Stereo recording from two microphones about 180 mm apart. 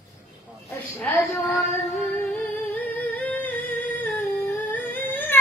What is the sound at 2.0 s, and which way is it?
Music, 10° left (ahead or behind).